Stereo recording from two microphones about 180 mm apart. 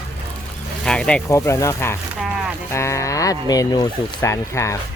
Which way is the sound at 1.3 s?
15° left (ahead or behind).